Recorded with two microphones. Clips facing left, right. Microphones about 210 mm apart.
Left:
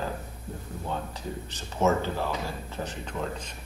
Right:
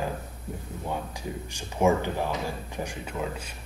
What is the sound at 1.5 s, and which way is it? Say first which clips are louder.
Speech: right 2 dB; 15° right (ahead or behind).